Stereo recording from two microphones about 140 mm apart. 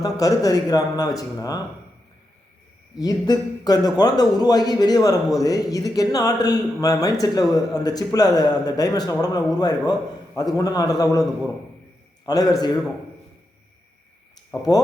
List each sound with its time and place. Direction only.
0.0 s a man's voice: 25° left (ahead or behind)
3.0 s a man's voice: 25° left (ahead or behind)
14.5 s a man's voice: 25° left (ahead or behind)